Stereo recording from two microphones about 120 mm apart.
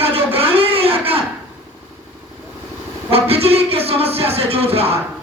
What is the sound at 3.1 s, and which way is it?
Speech, 55° right (ahead or behind).